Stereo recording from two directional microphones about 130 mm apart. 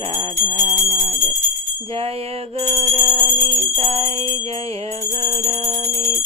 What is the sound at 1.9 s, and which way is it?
Music, 50° right (ahead or behind).